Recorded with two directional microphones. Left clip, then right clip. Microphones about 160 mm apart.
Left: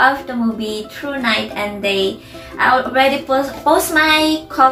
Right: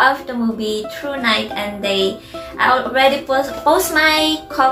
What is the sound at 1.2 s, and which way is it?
A woman's voice, 10° right (ahead or behind).